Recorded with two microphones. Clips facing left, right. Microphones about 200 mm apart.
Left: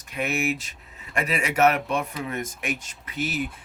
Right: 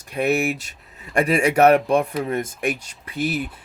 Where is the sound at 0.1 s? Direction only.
35° right (ahead or behind).